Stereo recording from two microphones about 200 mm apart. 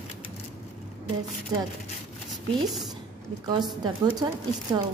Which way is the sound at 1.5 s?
20° right (ahead or behind).